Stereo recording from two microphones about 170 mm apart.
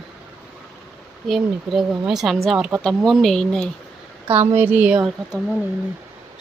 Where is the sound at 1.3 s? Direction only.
Centre (ahead or behind).